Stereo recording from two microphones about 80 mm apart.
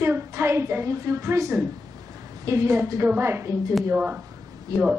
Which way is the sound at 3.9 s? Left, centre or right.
Right.